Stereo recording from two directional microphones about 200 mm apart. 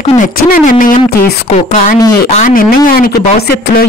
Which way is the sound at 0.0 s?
40° left (ahead or behind).